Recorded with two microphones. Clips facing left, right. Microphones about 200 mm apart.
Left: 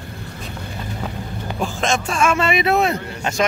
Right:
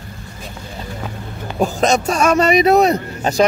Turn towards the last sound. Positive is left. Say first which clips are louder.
# right 5 dB
turn(degrees=-40)  # may be behind; listen again after turning